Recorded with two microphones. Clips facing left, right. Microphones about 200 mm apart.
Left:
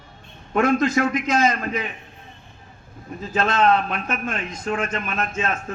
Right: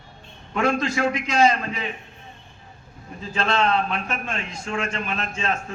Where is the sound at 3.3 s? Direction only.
45° left (ahead or behind).